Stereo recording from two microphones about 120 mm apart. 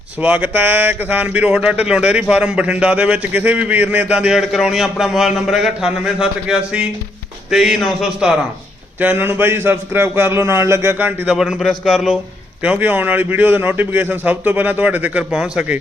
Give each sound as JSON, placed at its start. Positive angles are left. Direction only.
{"t": 0.2, "sound": "speech", "side_deg": -10}
{"t": 9.0, "sound": "a man's voice", "side_deg": -15}
{"t": 11.3, "sound": "speech", "side_deg": -5}
{"t": 12.6, "sound": "speech", "side_deg": -10}